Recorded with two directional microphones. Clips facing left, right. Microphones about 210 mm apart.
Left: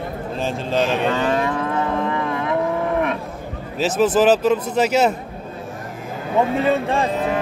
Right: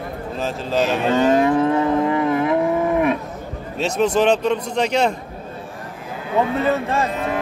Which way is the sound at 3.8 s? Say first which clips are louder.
Left 1 dB; 5° left (ahead or behind).